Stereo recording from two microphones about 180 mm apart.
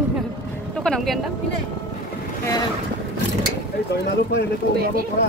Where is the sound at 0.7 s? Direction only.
5° left (ahead or behind).